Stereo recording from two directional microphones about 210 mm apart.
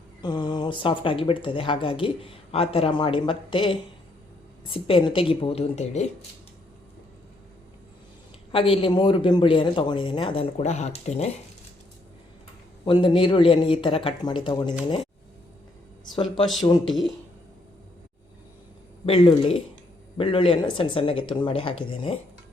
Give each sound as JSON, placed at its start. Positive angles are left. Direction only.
{"t": 0.2, "sound": "speech", "side_deg": 20}
{"t": 8.5, "sound": "speech", "side_deg": 25}
{"t": 12.8, "sound": "speech", "side_deg": 20}
{"t": 19.0, "sound": "speech", "side_deg": 25}